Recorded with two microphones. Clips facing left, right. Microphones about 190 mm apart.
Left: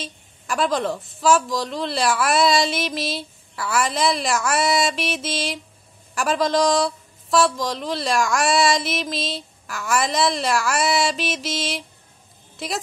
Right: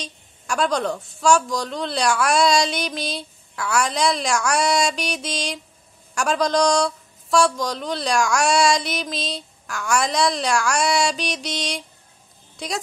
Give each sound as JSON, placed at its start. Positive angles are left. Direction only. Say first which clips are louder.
{"t": 0.0, "sound": "speech", "louder": "left 1 dB", "side_deg": 0}